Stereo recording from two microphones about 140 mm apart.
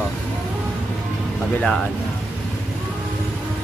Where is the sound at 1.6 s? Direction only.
Centre (ahead or behind).